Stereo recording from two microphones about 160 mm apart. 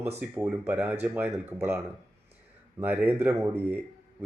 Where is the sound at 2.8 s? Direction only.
10° right (ahead or behind).